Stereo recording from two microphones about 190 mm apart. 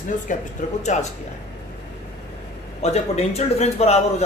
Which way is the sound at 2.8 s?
35° left (ahead or behind).